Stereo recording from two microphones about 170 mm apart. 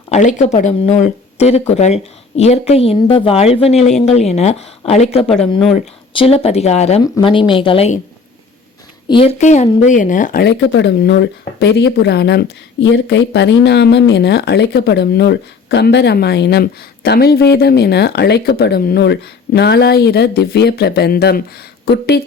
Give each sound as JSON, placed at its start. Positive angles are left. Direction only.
{"t": 0.1, "sound": "speech", "side_deg": 45}
{"t": 9.0, "sound": "a woman's voice", "side_deg": 30}
{"t": 9.4, "sound": "speech", "side_deg": 45}
{"t": 10.4, "sound": "speech", "side_deg": 85}